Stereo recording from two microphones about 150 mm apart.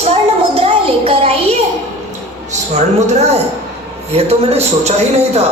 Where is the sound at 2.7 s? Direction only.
50° right (ahead or behind).